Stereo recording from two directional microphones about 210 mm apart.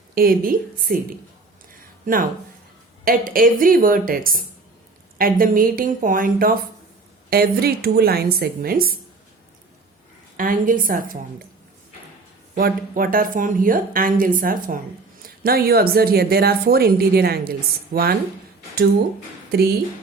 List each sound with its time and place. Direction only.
0.1 s a woman's voice: 45° right (ahead or behind)
3.0 s a woman's voice: 45° right (ahead or behind)
10.3 s a woman's voice: 40° right (ahead or behind)
12.5 s a woman's voice: 45° right (ahead or behind)
19.5 s speech: 50° right (ahead or behind)